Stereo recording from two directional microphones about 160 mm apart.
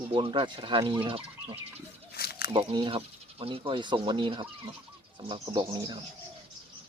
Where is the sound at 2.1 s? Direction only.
80° left.